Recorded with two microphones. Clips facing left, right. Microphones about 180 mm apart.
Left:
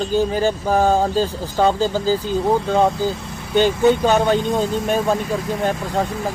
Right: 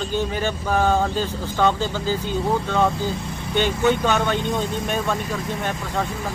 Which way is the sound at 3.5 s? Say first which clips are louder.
Left 5 dB; 40° left (ahead or behind).